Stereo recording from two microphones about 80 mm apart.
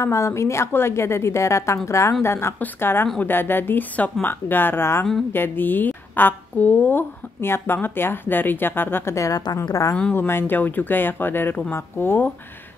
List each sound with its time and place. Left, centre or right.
0.0 s a woman's voice: left
9.1 s a woman's voice: left
10.1 s a woman's voice: left